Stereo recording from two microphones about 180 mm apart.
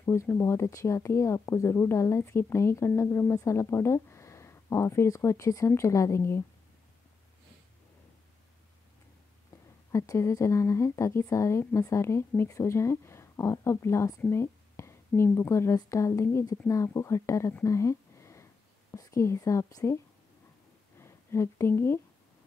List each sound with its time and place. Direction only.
0.0 s speech: 15° left (ahead or behind)
9.5 s a sound: 20° left (ahead or behind)
9.9 s speech: 15° left (ahead or behind)
21.0 s speech: 15° left (ahead or behind)